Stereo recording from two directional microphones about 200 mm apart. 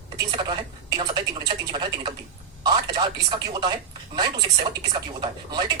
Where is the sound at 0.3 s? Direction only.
25° right (ahead or behind).